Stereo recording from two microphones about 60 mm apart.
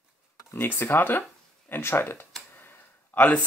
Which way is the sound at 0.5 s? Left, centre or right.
Left.